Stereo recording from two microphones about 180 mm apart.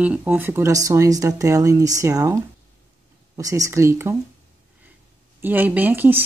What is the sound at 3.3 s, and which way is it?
Speech, 20° right (ahead or behind).